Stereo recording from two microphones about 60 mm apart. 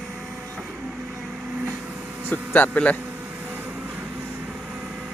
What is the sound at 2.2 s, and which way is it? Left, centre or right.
Speech, left.